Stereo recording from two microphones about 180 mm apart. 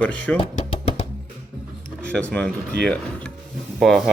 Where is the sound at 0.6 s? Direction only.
35° left (ahead or behind).